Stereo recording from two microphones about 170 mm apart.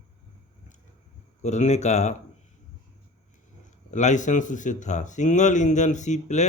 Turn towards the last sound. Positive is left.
turn(degrees=45)  # may be behind; listen again after turning